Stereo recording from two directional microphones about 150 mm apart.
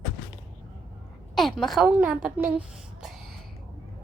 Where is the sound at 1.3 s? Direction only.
Centre (ahead or behind).